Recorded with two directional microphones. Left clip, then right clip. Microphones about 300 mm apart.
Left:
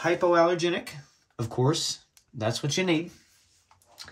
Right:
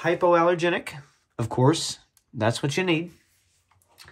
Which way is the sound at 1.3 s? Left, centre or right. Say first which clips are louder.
Right 5 dB; right.